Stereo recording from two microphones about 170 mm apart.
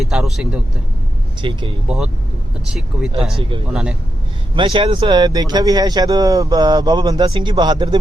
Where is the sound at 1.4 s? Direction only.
30° right (ahead or behind).